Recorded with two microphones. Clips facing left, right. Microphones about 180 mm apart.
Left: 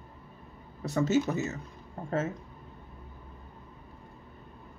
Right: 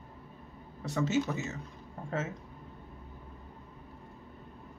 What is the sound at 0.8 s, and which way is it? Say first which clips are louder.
Speech: left 4 dB; 40° left (ahead or behind).